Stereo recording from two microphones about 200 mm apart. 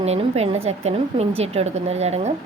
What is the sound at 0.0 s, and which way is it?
A woman's voice, 30° right (ahead or behind).